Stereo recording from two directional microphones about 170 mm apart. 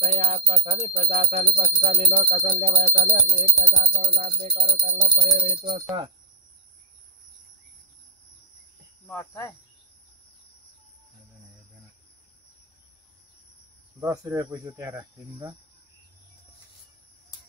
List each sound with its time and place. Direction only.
0.0 s speech: 35° right (ahead or behind)
9.1 s insect: 15° left (ahead or behind)
13.9 s speech: 20° right (ahead or behind)